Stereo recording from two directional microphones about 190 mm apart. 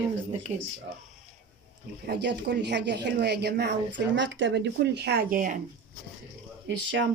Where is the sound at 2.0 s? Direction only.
60° right (ahead or behind); by 5.5 s 45° right (ahead or behind).